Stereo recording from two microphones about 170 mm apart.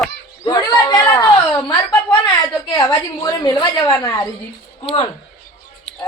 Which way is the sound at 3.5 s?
20° left (ahead or behind).